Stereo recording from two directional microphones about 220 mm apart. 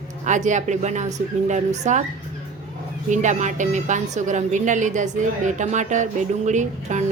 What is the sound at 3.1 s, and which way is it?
A woman's voice, 35° right (ahead or behind).